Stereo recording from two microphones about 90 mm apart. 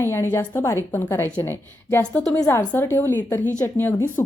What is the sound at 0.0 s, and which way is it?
A woman's voice, 30° left (ahead or behind).